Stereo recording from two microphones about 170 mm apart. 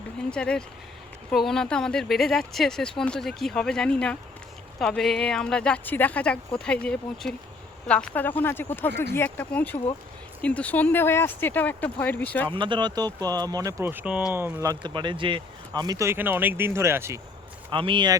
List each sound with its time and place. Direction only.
0.3 s speech: 5° left (ahead or behind)
12.5 s speech: 30° right (ahead or behind)
17.7 s speech: 30° right (ahead or behind)